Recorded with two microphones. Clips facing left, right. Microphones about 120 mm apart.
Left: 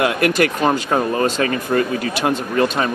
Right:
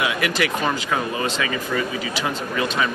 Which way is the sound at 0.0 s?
50° left (ahead or behind).